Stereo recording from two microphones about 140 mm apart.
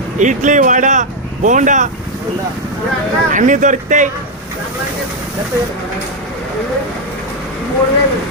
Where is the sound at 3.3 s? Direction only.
65° right (ahead or behind).